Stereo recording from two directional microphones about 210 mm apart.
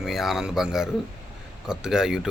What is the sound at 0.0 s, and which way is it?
Speech, centre (ahead or behind).